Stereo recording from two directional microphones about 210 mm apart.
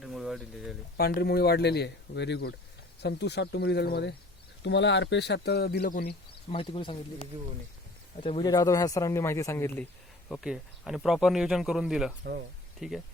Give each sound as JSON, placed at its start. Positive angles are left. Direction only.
{"t": 0.0, "sound": "a sound", "side_deg": 0}
{"t": 0.9, "sound": "speech", "side_deg": 45}
{"t": 6.5, "sound": "speech", "side_deg": 25}
{"t": 8.2, "sound": "speech", "side_deg": 25}
{"t": 10.2, "sound": "a man's voice", "side_deg": 0}